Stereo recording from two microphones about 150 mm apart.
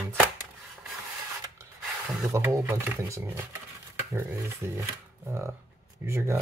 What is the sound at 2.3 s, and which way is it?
Speech, 20° right (ahead or behind).